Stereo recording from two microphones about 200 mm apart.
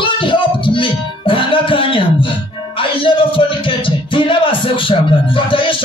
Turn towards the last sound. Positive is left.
turn(degrees=25)  # may be behind; listen again after turning